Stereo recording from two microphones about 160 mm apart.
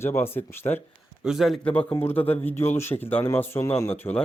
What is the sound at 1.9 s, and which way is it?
Speech, 15° left (ahead or behind).